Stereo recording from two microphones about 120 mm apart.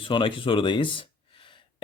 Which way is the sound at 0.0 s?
45° left (ahead or behind).